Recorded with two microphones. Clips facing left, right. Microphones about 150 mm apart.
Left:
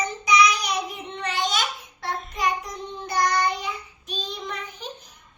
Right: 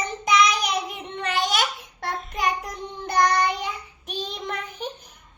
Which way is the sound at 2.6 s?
55° right (ahead or behind).